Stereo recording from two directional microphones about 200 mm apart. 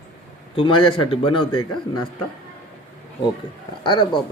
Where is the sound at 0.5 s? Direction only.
25° left (ahead or behind).